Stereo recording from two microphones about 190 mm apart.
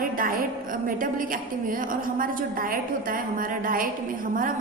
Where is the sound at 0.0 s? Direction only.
50° right (ahead or behind).